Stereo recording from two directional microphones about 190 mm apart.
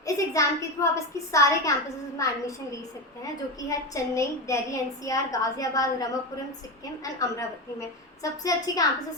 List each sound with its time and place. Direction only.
0.0 s a woman's voice: 15° left (ahead or behind)
3.7 s a woman's voice: 15° left (ahead or behind)